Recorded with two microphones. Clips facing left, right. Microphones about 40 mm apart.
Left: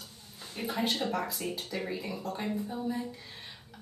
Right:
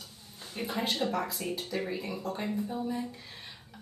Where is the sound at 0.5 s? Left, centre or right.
Centre.